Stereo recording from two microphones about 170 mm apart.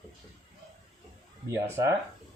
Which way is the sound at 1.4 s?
20° right (ahead or behind).